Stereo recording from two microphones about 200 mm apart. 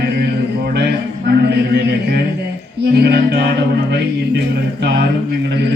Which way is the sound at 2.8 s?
55° right (ahead or behind).